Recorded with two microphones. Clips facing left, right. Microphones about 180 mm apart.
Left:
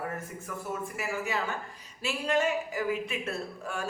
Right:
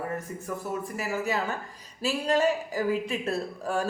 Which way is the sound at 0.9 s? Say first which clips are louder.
Right 4 dB; 40° right (ahead or behind).